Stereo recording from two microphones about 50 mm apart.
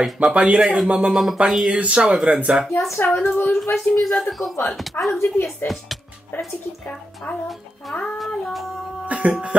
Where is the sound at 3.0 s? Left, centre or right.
Left.